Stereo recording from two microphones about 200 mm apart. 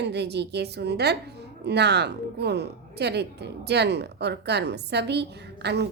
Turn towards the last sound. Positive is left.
turn(degrees=-55)  # may be behind; listen again after turning